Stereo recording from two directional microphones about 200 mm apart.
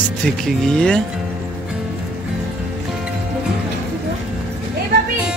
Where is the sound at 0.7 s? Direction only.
5° left (ahead or behind).